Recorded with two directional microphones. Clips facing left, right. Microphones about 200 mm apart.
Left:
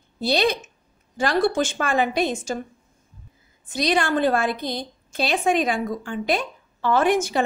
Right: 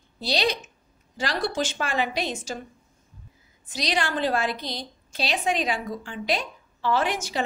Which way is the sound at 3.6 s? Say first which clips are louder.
Left 6 dB; 55° left (ahead or behind).